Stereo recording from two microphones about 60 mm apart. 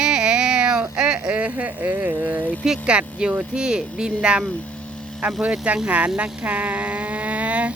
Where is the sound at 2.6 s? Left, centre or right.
Centre.